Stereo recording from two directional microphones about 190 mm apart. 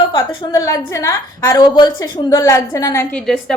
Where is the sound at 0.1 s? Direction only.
25° left (ahead or behind).